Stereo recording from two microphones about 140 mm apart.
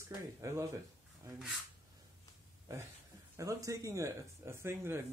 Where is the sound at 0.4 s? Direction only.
25° right (ahead or behind).